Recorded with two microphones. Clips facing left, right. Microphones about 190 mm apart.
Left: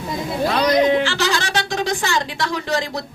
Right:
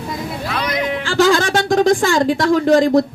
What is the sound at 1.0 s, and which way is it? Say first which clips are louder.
Speech: right 7 dB; 50° right (ahead or behind).